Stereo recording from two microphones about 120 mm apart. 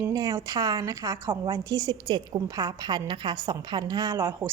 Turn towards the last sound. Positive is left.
turn(degrees=-20)  # may be behind; listen again after turning